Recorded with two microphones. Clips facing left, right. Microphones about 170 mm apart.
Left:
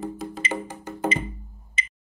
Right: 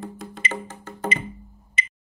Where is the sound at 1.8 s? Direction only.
65° right (ahead or behind).